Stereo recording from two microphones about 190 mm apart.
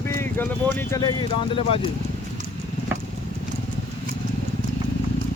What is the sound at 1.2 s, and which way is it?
Speech, 30° left (ahead or behind).